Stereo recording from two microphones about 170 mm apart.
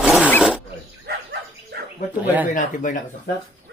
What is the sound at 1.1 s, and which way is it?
Dog, 70° right (ahead or behind).